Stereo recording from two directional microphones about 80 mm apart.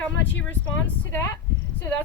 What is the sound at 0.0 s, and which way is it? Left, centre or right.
Speech, left.